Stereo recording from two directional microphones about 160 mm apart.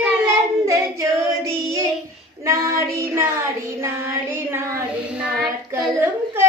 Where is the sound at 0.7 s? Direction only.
20° right (ahead or behind).